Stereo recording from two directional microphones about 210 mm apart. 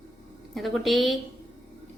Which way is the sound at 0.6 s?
Centre (ahead or behind).